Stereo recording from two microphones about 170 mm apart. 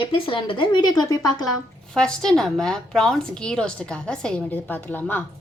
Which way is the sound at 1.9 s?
5° left (ahead or behind).